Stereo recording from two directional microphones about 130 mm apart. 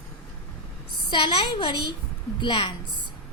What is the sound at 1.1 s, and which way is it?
A woman's voice, 40° left (ahead or behind).